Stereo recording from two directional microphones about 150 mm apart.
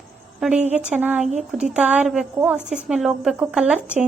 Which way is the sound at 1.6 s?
10° right (ahead or behind).